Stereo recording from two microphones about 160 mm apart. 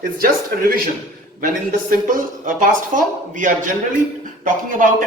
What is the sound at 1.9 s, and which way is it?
Speech, 55° right (ahead or behind).